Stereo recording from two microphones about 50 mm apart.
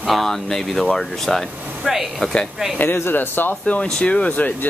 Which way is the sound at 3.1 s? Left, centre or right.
Left.